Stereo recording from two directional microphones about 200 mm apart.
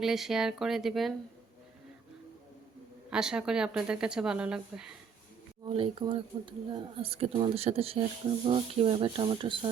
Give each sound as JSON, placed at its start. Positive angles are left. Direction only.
{"t": 0.0, "sound": "speech", "side_deg": 0}
{"t": 3.1, "sound": "speech", "side_deg": -5}
{"t": 5.6, "sound": "speech", "side_deg": -25}